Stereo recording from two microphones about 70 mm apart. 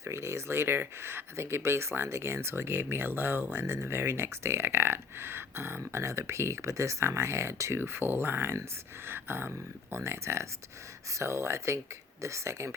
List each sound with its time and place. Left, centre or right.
0.0 s speech: right